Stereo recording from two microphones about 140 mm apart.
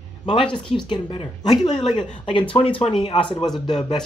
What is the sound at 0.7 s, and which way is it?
Speech, 35° left (ahead or behind).